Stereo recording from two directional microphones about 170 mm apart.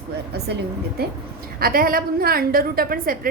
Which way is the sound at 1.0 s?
65° right (ahead or behind).